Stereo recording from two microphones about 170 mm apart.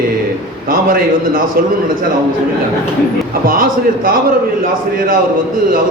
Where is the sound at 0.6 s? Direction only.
55° right (ahead or behind).